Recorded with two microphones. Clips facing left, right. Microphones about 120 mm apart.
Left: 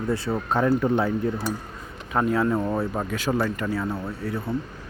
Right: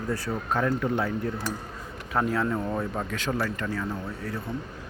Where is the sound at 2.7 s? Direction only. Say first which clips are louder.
Left 4 dB; 25° left (ahead or behind).